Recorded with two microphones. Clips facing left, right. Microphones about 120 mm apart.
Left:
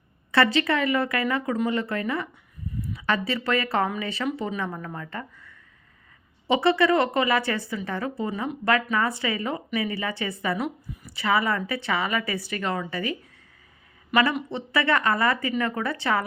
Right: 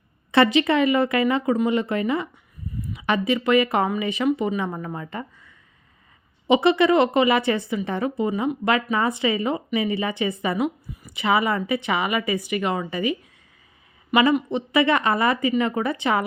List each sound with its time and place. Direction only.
0.3 s a woman's voice: 20° right (ahead or behind)